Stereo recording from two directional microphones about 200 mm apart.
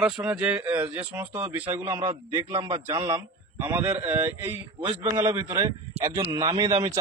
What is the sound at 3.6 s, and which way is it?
A man's voice, 10° right (ahead or behind).